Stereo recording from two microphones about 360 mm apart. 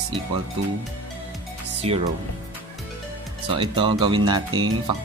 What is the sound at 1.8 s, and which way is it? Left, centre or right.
Speech, centre.